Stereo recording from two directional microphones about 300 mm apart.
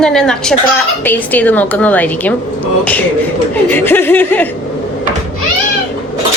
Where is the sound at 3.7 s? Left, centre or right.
Centre.